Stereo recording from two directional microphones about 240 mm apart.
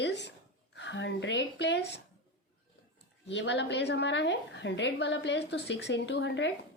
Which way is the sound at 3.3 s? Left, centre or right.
Left.